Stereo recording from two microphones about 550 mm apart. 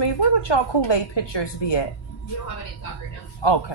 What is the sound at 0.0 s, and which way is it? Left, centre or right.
A woman's voice, left.